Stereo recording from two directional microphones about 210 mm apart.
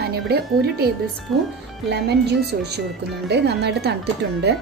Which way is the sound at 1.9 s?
50° right (ahead or behind).